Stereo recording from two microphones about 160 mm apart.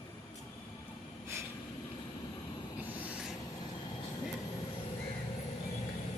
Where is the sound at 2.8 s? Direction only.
10° right (ahead or behind).